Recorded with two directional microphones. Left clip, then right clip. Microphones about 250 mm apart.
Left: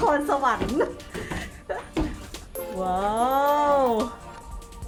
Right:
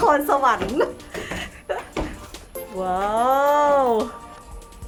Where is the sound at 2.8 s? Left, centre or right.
Centre.